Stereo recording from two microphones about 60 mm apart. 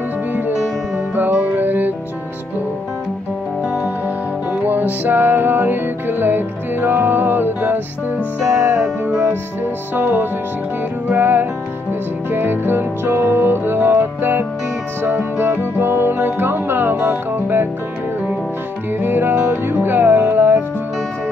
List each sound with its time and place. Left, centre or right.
1.1 s music: right
4.6 s music: right
8.5 s music: right
9.9 s music: right
18.9 s music: right